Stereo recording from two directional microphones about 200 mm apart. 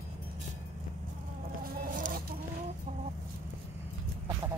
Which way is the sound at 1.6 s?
45° right (ahead or behind).